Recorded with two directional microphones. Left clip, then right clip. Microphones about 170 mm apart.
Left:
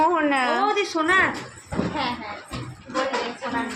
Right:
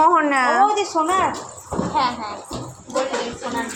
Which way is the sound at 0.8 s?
15° left (ahead or behind).